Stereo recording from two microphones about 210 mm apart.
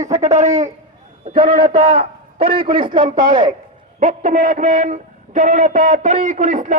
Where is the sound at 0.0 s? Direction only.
35° right (ahead or behind).